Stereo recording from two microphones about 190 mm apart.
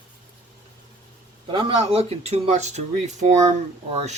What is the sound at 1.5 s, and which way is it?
Speech, 25° right (ahead or behind).